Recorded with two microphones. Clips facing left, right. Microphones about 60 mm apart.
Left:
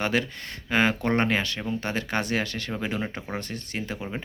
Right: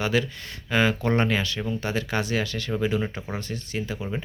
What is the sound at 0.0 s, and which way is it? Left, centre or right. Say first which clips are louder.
Speech: right 1 dB; left.